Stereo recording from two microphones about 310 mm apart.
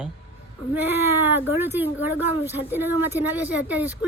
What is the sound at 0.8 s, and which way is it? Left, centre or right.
Speech, centre.